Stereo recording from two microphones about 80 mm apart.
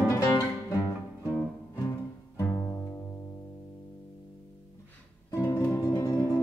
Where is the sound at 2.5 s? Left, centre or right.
Left.